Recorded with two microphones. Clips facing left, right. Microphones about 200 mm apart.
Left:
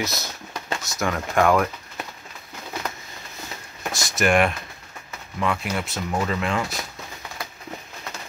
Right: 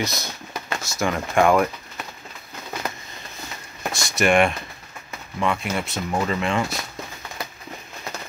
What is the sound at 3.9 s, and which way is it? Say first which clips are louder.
Speech: right 1 dB; 20° left (ahead or behind).